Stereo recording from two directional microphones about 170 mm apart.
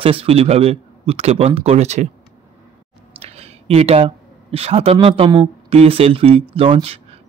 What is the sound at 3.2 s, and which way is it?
Speech, 35° right (ahead or behind).